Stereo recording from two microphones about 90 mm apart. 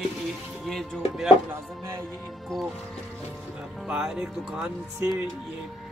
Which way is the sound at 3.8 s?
10° right (ahead or behind).